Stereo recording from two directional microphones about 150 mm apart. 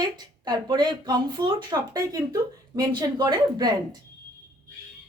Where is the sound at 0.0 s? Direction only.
25° right (ahead or behind).